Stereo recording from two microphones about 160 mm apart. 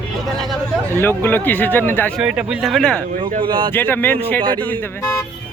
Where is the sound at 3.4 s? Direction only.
30° right (ahead or behind).